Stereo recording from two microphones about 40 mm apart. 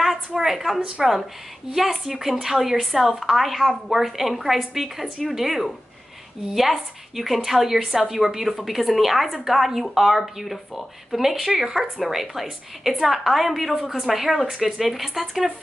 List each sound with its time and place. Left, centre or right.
0.4 s speech: centre
0.7 s speech: right
1.8 s a woman's voice: centre